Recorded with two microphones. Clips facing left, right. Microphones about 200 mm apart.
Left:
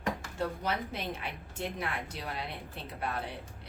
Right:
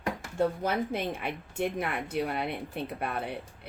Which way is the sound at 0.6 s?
55° right (ahead or behind).